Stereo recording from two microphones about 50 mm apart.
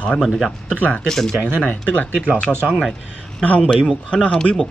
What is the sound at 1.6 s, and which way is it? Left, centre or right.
Speech, left.